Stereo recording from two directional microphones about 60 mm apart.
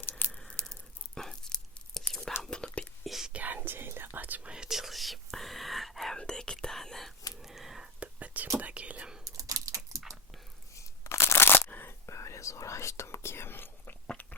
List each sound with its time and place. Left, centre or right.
0.0 s tearing: left
0.4 s tearing: centre
2.4 s whispering: centre
3.0 s whispering: centre
3.3 s whispering: right
4.4 s whispering: centre
6.1 s whispering: centre
7.9 s whispering: right
9.2 s dog: right
10.8 s a sound: left
11.7 s camera: left
12.0 s whispering: left